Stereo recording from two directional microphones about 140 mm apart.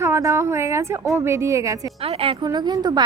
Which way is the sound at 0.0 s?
20° right (ahead or behind).